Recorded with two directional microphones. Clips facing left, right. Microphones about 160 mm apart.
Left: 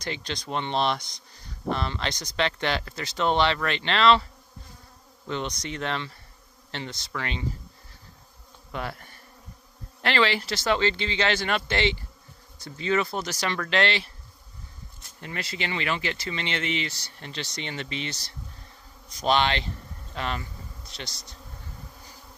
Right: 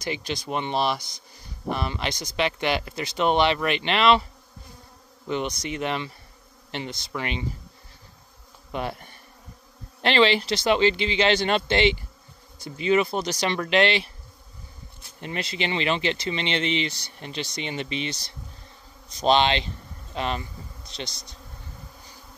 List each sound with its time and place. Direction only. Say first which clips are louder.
0.0 s speech: right 3 dB; 10° right (ahead or behind)
5.2 s insect: right 3 dB; 15° right (ahead or behind)
5.6 s speech: right 3 dB; 10° right (ahead or behind)
8.7 s bee: right 4 dB; 20° right (ahead or behind)
10.0 s speech: right 4 dB; 20° right (ahead or behind)
15.1 s speech: right 4 dB; 20° right (ahead or behind)